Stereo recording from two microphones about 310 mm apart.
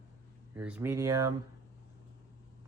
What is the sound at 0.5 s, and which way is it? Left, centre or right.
Speech, centre.